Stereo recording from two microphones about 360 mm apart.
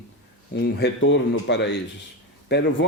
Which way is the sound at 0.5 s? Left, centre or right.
Left.